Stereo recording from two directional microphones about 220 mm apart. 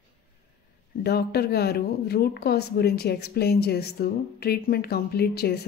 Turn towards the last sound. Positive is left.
turn(degrees=45)  # may be behind; listen again after turning